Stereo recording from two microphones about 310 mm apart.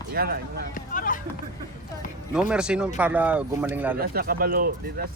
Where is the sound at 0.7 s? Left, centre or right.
Left.